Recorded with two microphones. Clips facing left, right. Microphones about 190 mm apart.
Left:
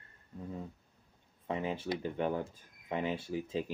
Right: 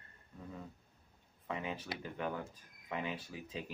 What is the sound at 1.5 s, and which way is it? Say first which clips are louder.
Speech: left 6 dB; 30° left (ahead or behind).